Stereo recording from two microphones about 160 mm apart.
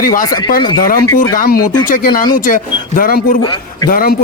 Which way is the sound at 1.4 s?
70° left (ahead or behind).